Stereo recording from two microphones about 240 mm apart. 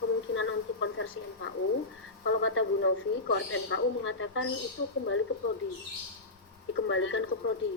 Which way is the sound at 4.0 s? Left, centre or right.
Left.